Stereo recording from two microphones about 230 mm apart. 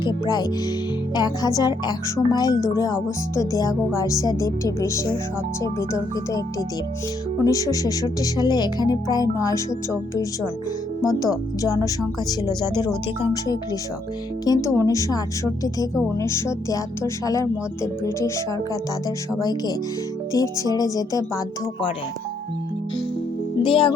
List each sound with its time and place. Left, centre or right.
0.1 s speech: centre
14.4 s speech: centre
23.6 s speech: left